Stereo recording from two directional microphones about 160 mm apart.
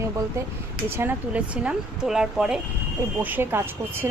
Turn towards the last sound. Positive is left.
turn(degrees=-15)  # may be behind; listen again after turning